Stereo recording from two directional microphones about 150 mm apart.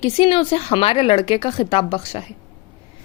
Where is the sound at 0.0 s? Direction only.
35° left (ahead or behind).